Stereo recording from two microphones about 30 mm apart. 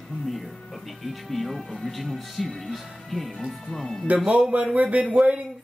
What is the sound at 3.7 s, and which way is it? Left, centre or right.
Speech, centre.